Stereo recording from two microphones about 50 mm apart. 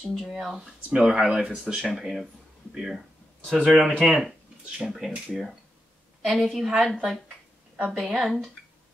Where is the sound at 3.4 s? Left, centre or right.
Centre.